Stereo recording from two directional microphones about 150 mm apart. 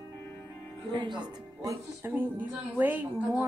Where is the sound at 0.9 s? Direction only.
30° right (ahead or behind).